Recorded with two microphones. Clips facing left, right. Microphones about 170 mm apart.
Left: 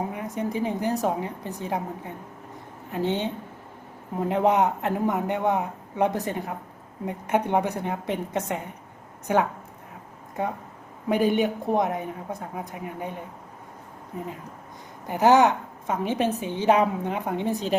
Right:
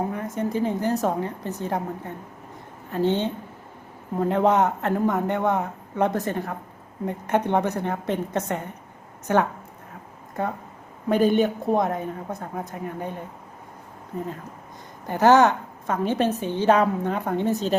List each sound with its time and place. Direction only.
0.3 s a man's voice: 15° left (ahead or behind)
4.3 s a man's voice: 15° left (ahead or behind)
15.0 s a man's voice: 15° left (ahead or behind)